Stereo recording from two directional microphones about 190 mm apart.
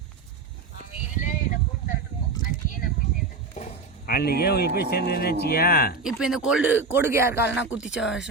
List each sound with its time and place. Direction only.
1.1 s a sound: 40° left (ahead or behind)
4.0 s speech: 55° left (ahead or behind)
6.0 s speech: 5° right (ahead or behind)